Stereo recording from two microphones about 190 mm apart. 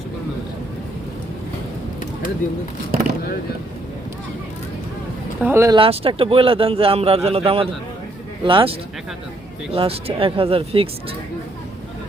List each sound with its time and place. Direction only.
2.4 s speech: 45° left (ahead or behind)
5.4 s speech: 10° right (ahead or behind)
5.7 s speech: 30° right (ahead or behind)
9.7 s speech: 30° right (ahead or behind)